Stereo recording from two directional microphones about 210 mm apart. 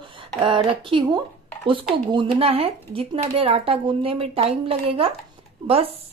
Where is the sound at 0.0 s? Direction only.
25° right (ahead or behind).